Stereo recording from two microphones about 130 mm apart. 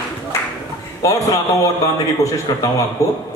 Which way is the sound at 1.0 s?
25° left (ahead or behind).